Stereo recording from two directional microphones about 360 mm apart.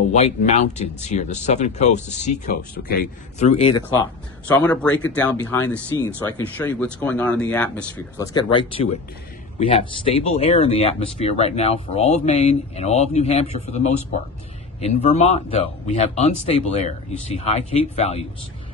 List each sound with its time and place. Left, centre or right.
0.1 s speech: centre